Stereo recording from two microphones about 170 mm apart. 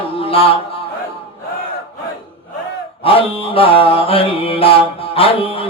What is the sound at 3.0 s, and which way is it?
Mantra, 35° left (ahead or behind).